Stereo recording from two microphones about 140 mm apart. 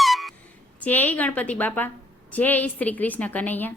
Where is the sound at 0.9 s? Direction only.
10° left (ahead or behind).